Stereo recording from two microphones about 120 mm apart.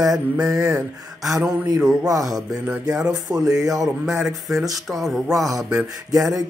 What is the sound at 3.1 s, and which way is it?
Speech, 30° right (ahead or behind).